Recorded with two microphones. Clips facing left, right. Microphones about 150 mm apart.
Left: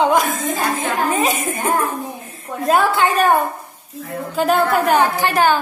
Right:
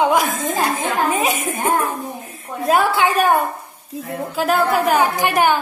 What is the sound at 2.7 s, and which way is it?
A woman's voice, 5° right (ahead or behind).